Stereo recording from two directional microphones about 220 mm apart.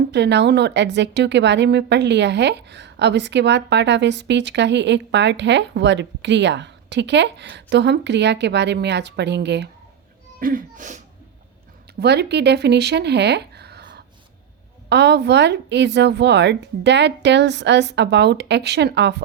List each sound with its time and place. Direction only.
0.1 s a woman's voice: 50° right (ahead or behind)
10.4 s a sound: 35° right (ahead or behind)
11.9 s a woman's voice: 50° right (ahead or behind)